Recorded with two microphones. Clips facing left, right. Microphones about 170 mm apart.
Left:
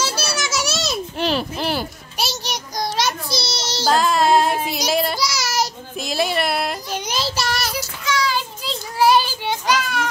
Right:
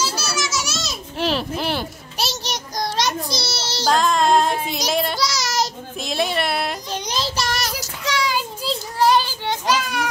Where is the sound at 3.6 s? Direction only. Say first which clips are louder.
Left 1 dB; 15° left (ahead or behind).